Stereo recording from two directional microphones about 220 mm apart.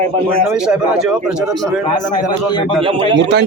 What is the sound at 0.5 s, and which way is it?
Speech, 5° right (ahead or behind).